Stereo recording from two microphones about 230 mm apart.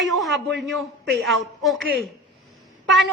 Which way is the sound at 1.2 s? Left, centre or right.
Centre.